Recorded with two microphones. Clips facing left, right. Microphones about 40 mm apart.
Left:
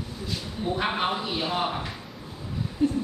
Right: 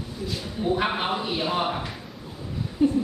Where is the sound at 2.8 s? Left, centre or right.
Centre.